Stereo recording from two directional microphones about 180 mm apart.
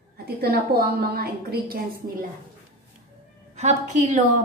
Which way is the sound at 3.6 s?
40° right (ahead or behind).